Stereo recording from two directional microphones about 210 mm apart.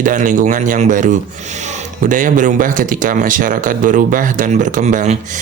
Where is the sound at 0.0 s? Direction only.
40° right (ahead or behind).